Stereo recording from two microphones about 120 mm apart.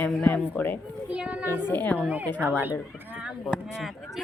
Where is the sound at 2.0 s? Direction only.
10° right (ahead or behind).